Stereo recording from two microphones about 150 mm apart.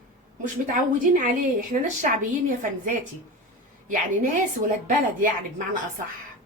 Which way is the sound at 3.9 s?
60° right (ahead or behind).